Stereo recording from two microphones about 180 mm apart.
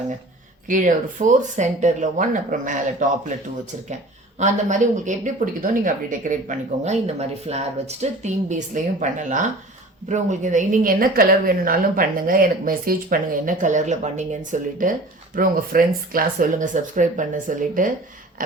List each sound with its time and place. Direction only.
0.7 s speech: 45° right (ahead or behind)
4.4 s speech: 45° right (ahead or behind)